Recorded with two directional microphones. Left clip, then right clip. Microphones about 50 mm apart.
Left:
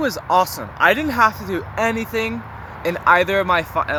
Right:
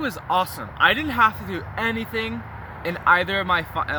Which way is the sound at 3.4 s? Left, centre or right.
Right.